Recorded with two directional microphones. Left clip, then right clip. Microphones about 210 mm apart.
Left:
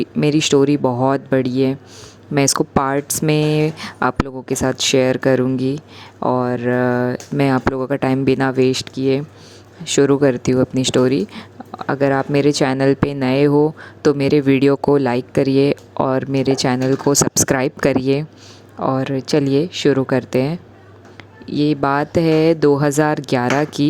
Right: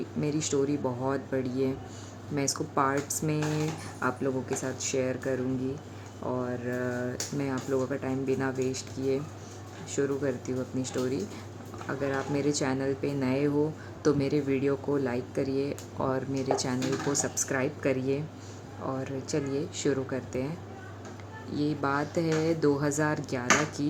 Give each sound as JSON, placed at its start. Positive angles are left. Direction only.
{"t": 0.2, "sound": "speech", "side_deg": 40}
{"t": 21.5, "sound": "speech", "side_deg": 35}